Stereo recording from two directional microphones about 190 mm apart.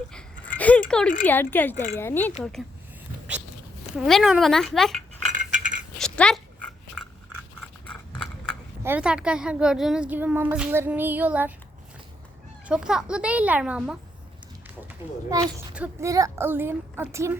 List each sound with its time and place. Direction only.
0.1 s a sound: 5° left (ahead or behind)
0.9 s speech: 5° left (ahead or behind)
1.7 s speech: 40° left (ahead or behind)
2.0 s a child's voice: 10° left (ahead or behind)
3.9 s speech: centre (ahead or behind)
5.3 s a sound: 40° right (ahead or behind)
6.0 s a sound: 5° left (ahead or behind)
7.9 s horse: 5° left (ahead or behind)
8.8 s a woman's voice: 10° right (ahead or behind)
12.6 s a child's voice: 5° right (ahead or behind)
15.7 s a woman's voice: 10° right (ahead or behind)